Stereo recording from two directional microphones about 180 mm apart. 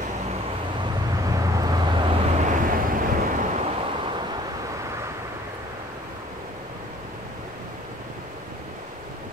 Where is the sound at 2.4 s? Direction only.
50° right (ahead or behind).